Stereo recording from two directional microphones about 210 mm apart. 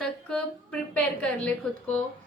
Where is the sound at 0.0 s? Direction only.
5° left (ahead or behind).